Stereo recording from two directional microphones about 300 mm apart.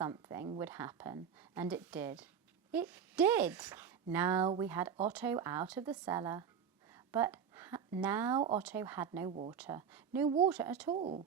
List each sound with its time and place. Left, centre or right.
0.0 s speech: centre
6.9 s a sound: centre
7.9 s speech: centre
10.2 s speech: centre
10.5 s speech: centre
10.8 s a woman's voice: centre